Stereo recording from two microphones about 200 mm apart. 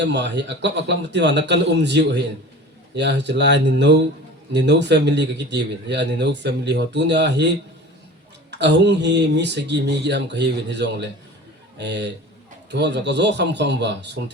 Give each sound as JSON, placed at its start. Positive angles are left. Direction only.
{"t": 0.0, "sound": "speech", "side_deg": -60}